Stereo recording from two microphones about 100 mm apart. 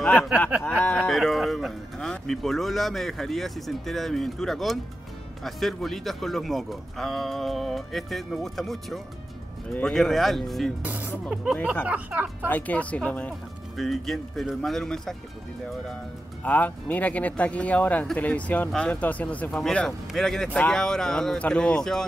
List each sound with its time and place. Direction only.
0.0 s a sound: 10° left (ahead or behind)
0.7 s speech: 15° left (ahead or behind)
1.1 s speech: centre (ahead or behind)
10.8 s speech: 15° right (ahead or behind)
12.4 s speech: 15° left (ahead or behind)
13.7 s speech: centre (ahead or behind)
16.4 s speech: 15° left (ahead or behind)